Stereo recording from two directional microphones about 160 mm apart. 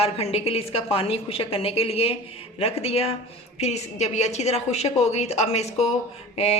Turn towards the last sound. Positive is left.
turn(degrees=40)  # may be behind; listen again after turning